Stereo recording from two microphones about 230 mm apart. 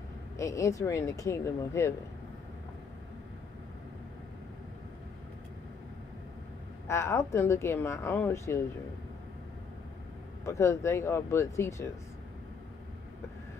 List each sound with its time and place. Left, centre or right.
0.4 s speech: centre
6.9 s speech: centre
10.4 s speech: centre